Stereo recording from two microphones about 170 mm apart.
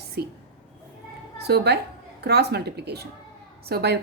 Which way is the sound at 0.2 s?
70° right (ahead or behind).